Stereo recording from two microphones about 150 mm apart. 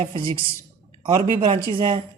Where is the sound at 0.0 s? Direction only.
35° right (ahead or behind).